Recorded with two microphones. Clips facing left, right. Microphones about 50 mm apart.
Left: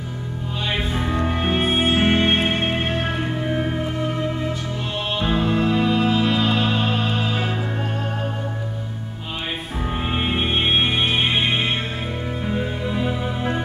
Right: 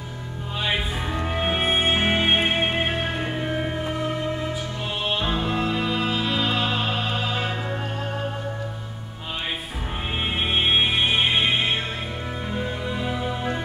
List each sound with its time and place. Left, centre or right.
0.7 s music: centre
5.2 s music: centre
10.1 s music: centre